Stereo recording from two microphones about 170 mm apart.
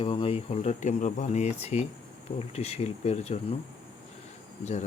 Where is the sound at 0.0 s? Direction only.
30° left (ahead or behind).